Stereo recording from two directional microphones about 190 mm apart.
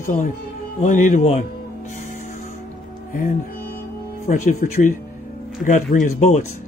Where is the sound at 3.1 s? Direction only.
45° left (ahead or behind).